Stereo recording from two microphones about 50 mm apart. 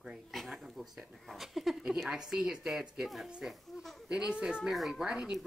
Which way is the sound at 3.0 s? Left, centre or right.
Centre.